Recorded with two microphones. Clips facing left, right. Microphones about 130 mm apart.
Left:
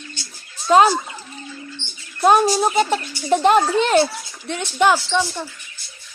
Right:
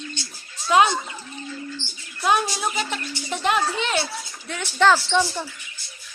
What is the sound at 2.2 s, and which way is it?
A woman's voice, 40° left (ahead or behind).